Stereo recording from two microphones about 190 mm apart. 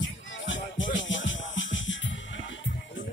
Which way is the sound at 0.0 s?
80° left.